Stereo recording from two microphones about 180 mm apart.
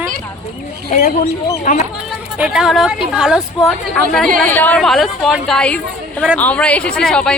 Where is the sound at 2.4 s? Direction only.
5° right (ahead or behind).